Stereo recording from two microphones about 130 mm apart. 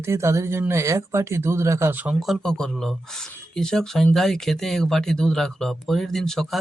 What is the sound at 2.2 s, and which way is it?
Speech, centre (ahead or behind).